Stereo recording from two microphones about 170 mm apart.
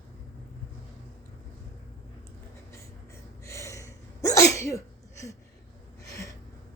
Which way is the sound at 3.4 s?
15° left (ahead or behind).